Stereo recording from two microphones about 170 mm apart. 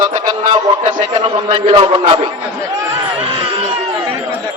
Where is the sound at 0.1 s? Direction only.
25° right (ahead or behind).